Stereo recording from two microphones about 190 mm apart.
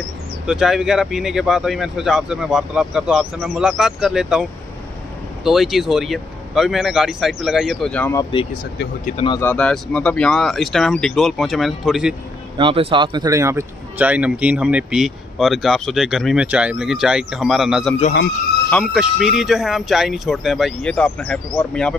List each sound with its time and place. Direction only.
0.5 s speech: 5° right (ahead or behind)
8.2 s speech: 25° left (ahead or behind)
9.4 s speech: 5° left (ahead or behind)
12.5 s speech: 25° right (ahead or behind); by 21.9 s 5° left (ahead or behind)